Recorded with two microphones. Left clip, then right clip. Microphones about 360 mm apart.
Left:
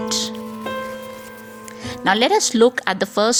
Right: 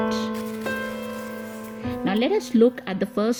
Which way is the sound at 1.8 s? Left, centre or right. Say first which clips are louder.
Left 7 dB; centre.